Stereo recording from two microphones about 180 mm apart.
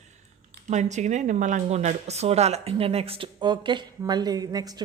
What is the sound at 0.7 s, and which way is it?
A woman's voice, 40° right (ahead or behind).